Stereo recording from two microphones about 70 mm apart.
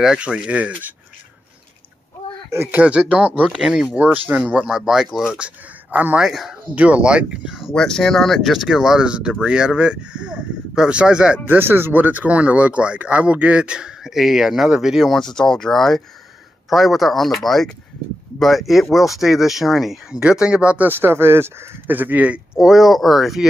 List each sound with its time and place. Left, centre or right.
0.0 s speech: centre
2.5 s speech: right
2.8 s speech: centre
3.6 s speech: centre
4.0 s speech: right
5.9 s speech: right
6.2 s speech: centre
6.7 s speech: centre
7.7 s speech: centre
11.4 s speech: right; by 15.1 s centre
15.1 s speech: centre; by 22.4 s right
22.6 s speech: centre